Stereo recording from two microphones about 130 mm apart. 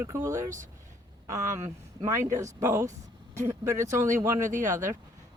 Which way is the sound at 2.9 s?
65° right (ahead or behind).